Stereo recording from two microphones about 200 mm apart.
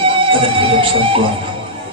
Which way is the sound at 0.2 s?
25° right (ahead or behind).